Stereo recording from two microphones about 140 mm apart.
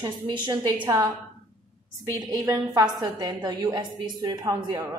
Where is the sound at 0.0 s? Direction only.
30° right (ahead or behind).